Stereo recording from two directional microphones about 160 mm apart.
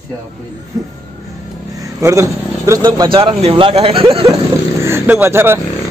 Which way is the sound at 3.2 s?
35° right (ahead or behind).